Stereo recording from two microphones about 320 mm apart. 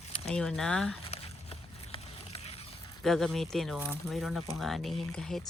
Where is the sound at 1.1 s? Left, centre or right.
Centre.